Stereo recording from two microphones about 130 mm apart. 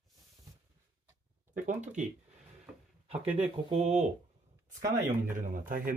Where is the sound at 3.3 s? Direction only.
10° right (ahead or behind).